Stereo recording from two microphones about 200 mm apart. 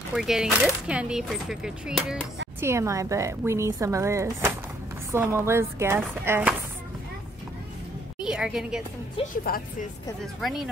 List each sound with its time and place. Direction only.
0.1 s speech: centre (ahead or behind)
2.6 s speech: 15° right (ahead or behind)
8.2 s a woman's voice: 5° right (ahead or behind)
9.4 s speech: 45° left (ahead or behind)
10.4 s speech: centre (ahead or behind)